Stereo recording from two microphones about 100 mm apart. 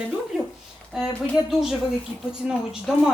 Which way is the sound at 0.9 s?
5° right (ahead or behind).